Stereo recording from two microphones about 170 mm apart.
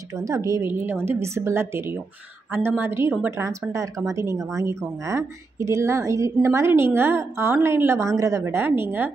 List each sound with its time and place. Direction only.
0.1 s a woman's voice: 20° right (ahead or behind)